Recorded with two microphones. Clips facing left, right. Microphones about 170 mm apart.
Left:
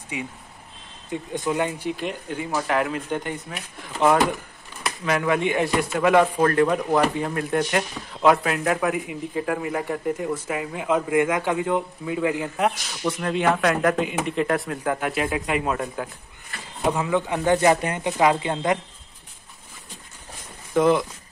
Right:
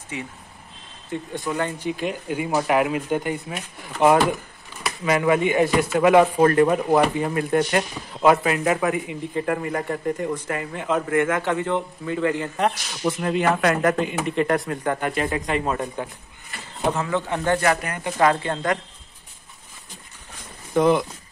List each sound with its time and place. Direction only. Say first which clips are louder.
0.1 s speech: left 1 dB; 15° left (ahead or behind)
1.9 s speech: right 2 dB; centre (ahead or behind)
13.0 s speech: right 1 dB; 5° right (ahead or behind)
16.9 s speech: left 1 dB; 15° left (ahead or behind)
20.7 s speech: right 1 dB; centre (ahead or behind)